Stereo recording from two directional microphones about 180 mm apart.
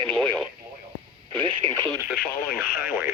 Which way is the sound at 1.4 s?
25° right (ahead or behind).